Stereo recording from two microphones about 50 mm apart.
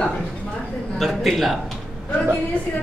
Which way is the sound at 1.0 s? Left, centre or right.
Centre.